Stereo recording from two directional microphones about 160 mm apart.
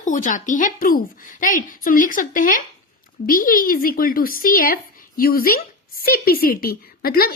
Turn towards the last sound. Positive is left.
turn(degrees=70)  # may be behind; listen again after turning